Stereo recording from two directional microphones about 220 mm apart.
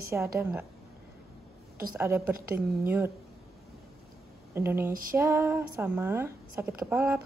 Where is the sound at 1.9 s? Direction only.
10° right (ahead or behind).